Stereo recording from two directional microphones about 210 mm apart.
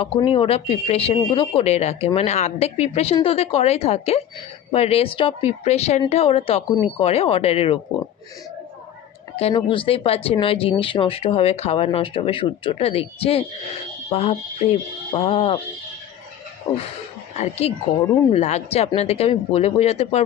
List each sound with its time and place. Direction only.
0.0 s speech: 25° left (ahead or behind)
9.3 s speech: 30° left (ahead or behind)
17.3 s speech: 30° left (ahead or behind)